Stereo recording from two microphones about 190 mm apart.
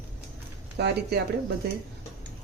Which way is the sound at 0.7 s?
65° right (ahead or behind).